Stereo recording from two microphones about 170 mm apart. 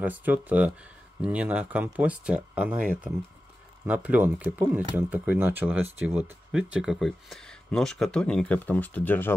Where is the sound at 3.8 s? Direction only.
10° right (ahead or behind).